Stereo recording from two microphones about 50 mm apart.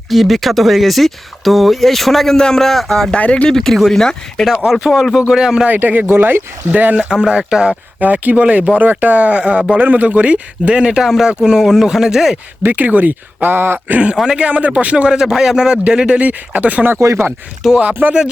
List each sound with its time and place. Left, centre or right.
0.1 s speech: centre
3.1 s speech: left
3.5 s speech: centre
5.3 s speech: centre
5.6 s speech: right
7.1 s speech: centre
8.0 s speech: right; by 12.4 s centre
12.6 s speech: right
14.3 s speech: right
16.2 s speech: right
17.6 s speech: centre
18.0 s speech: right